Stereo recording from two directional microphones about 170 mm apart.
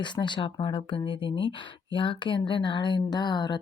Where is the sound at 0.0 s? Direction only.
25° left (ahead or behind).